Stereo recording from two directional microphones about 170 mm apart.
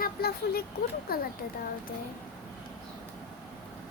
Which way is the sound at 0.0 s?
65° left (ahead or behind).